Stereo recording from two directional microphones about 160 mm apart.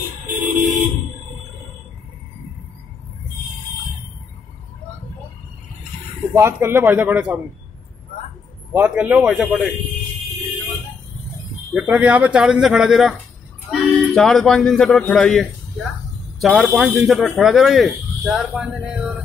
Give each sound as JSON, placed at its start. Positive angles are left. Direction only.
{"t": 0.3, "sound": "vehicle", "side_deg": -55}
{"t": 6.3, "sound": "a man's voice", "side_deg": -15}
{"t": 8.7, "sound": "a man's voice", "side_deg": -10}
{"t": 11.7, "sound": "a man's voice", "side_deg": -10}